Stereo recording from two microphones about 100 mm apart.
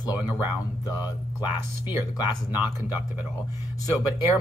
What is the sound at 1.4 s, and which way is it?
Speech, 15° right (ahead or behind).